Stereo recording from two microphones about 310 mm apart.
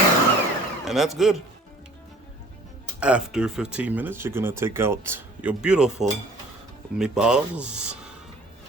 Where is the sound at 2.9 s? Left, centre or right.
Centre.